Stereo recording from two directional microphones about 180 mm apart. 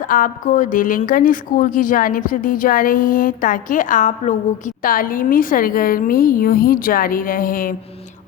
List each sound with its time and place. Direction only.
0.1 s a woman's voice: 45° left (ahead or behind)